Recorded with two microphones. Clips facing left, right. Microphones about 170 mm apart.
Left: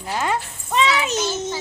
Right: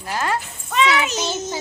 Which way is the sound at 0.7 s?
30° left (ahead or behind).